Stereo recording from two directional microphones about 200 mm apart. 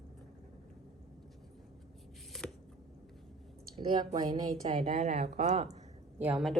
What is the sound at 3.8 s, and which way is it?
Speech, 20° right (ahead or behind).